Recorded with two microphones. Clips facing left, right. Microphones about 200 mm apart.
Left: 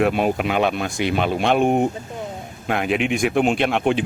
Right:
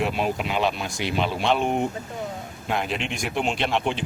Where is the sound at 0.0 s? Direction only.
55° left (ahead or behind).